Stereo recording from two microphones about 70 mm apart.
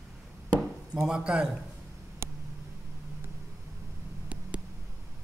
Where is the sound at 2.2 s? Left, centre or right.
Right.